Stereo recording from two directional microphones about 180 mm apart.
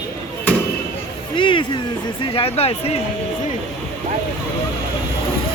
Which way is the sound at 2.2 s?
30° left (ahead or behind).